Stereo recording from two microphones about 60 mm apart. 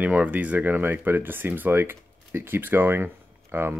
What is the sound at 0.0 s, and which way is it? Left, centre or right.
Speech, right.